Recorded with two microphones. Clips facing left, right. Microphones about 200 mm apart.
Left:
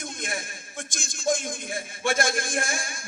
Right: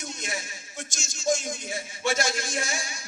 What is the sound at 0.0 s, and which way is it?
A man's voice, 55° left (ahead or behind).